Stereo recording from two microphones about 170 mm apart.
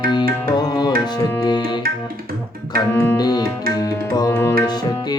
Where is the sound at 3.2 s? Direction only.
25° left (ahead or behind).